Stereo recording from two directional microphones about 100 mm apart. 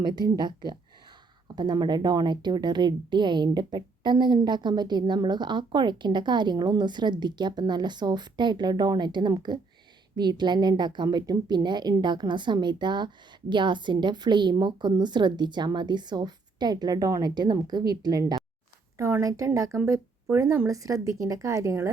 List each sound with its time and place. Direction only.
0.0 s a woman's voice: 45° right (ahead or behind)
18.9 s a woman's voice: 30° right (ahead or behind)